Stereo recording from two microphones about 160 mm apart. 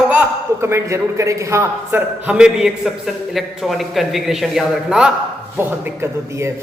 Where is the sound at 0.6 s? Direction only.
15° right (ahead or behind).